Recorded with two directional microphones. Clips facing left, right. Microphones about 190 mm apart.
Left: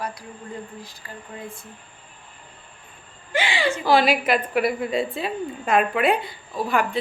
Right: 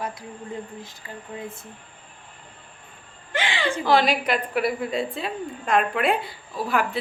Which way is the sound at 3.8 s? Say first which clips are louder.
Left 2 dB; 5° left (ahead or behind).